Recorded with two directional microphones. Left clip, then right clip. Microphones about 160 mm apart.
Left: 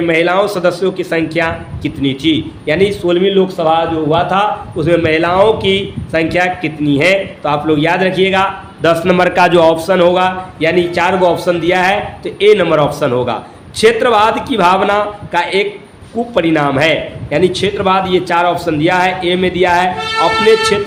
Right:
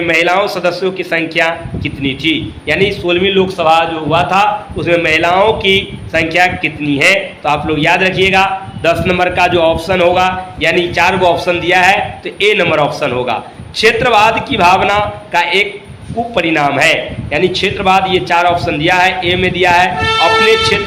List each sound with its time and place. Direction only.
0.0 s a man's voice: 35° left (ahead or behind)
3.2 s a man's voice: 20° left (ahead or behind)
4.8 s a man's voice: 40° left (ahead or behind)
8.8 s a man's voice: 70° left (ahead or behind); by 20.7 s 35° left (ahead or behind)